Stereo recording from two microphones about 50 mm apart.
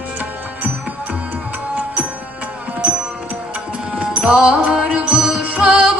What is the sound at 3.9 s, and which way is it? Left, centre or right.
Music, right.